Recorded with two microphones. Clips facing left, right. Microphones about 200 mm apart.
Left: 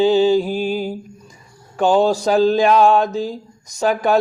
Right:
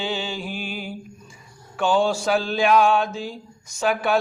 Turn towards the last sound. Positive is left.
turn(degrees=40)  # may be behind; listen again after turning